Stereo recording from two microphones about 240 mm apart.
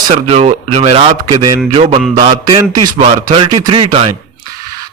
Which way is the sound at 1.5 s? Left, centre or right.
Right.